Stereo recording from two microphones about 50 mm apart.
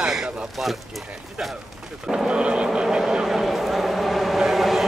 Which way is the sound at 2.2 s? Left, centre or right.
Centre.